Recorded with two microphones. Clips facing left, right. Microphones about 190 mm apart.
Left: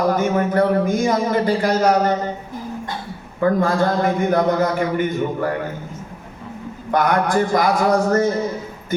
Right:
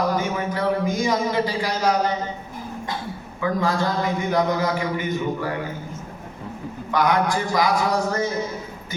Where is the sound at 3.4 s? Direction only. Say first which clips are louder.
Left 5 dB; 50° left (ahead or behind).